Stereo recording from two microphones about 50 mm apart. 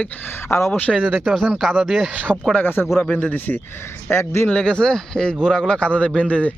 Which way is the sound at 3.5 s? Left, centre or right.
Left.